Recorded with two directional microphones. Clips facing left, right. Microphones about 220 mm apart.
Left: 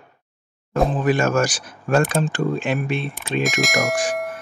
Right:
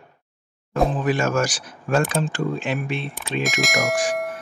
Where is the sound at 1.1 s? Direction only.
50° left (ahead or behind).